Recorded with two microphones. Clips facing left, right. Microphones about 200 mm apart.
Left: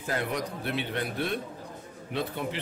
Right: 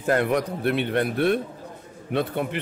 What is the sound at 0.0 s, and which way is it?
A man's voice, 60° right (ahead or behind).